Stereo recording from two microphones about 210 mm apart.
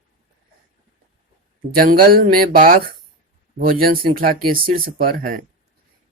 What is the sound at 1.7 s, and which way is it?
Speech, 45° right (ahead or behind).